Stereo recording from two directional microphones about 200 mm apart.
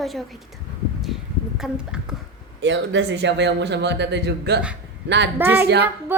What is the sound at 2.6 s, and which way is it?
Speech, 65° right (ahead or behind).